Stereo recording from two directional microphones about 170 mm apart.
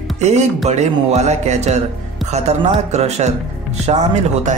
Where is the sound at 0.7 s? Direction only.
40° right (ahead or behind).